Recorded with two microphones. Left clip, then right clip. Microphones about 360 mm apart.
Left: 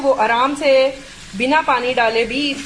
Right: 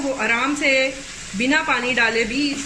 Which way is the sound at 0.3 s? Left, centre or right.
Centre.